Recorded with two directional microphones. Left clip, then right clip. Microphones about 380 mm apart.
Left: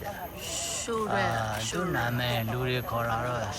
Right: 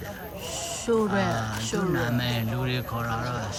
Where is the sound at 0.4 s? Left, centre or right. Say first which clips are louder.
Right 5 dB; right.